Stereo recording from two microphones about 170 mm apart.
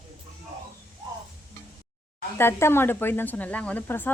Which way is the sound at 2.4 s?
15° left (ahead or behind).